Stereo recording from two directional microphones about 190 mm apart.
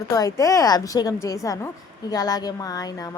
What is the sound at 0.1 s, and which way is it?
A woman's voice, 20° left (ahead or behind).